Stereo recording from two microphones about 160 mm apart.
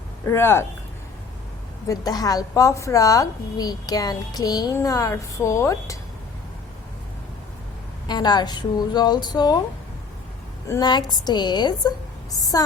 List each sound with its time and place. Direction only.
0.3 s speech: 15° left (ahead or behind)
1.9 s a woman's voice: 25° left (ahead or behind)
8.0 s a woman's voice: 25° left (ahead or behind)
10.7 s a woman's voice: 25° left (ahead or behind)